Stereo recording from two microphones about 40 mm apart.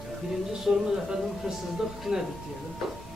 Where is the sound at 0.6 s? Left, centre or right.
Centre.